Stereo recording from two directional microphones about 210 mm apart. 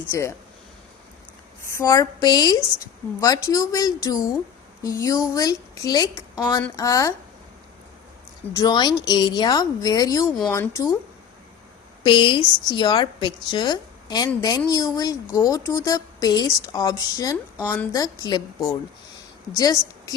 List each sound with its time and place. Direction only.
0.1 s speech: 15° left (ahead or behind)
1.6 s speech: 15° left (ahead or behind)
8.5 s a woman's voice: 20° left (ahead or behind)
12.0 s a woman's voice: 25° left (ahead or behind)
19.5 s a woman's voice: 20° left (ahead or behind)